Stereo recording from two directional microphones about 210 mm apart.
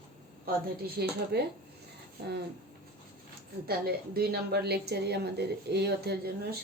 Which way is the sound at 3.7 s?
45° right (ahead or behind).